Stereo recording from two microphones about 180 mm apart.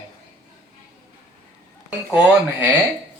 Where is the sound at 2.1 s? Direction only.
5° right (ahead or behind).